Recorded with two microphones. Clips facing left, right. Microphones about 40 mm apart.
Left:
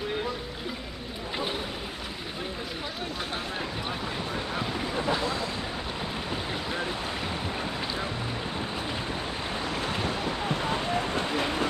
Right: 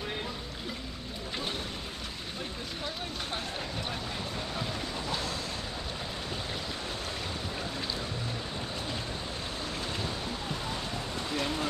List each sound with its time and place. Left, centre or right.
4.6 s boat: left
9.7 s boat: left
11.3 s vehicle: left